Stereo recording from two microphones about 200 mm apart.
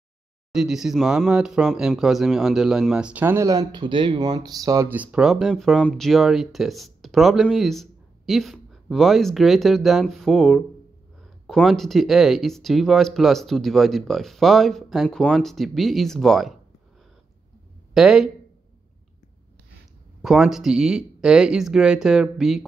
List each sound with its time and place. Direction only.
0.5 s speech: 5° right (ahead or behind)
17.9 s speech: centre (ahead or behind)
20.2 s speech: centre (ahead or behind)